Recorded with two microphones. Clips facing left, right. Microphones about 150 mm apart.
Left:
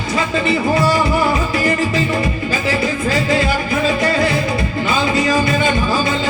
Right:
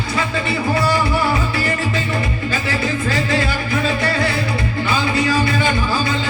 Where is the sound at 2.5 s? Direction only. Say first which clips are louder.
Left 1 dB; 15° left (ahead or behind).